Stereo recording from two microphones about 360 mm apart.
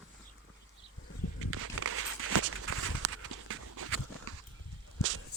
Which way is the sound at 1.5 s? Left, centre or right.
Right.